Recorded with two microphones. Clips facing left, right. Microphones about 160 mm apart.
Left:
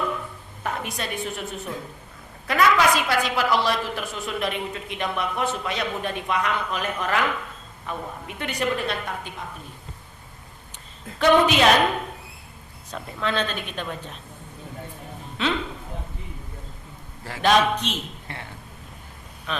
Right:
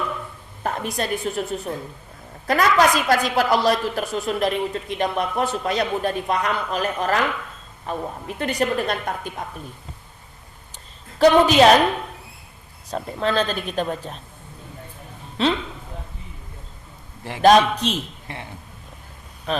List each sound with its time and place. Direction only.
0.6 s a woman's voice: 35° right (ahead or behind)
2.5 s a woman's voice: 40° right (ahead or behind)
11.2 s a woman's voice: 35° right (ahead or behind)
12.9 s a woman's voice: 35° right (ahead or behind)
15.4 s a woman's voice: 35° right (ahead or behind)
17.4 s a woman's voice: 40° right (ahead or behind)
19.5 s speech: 35° right (ahead or behind)